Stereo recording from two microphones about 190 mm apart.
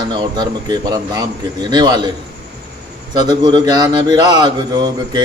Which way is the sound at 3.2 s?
20° right (ahead or behind).